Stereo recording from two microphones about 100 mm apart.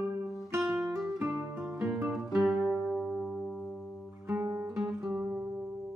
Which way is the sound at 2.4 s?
Centre (ahead or behind).